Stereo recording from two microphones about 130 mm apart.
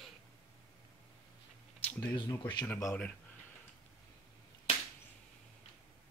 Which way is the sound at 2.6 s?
20° left (ahead or behind).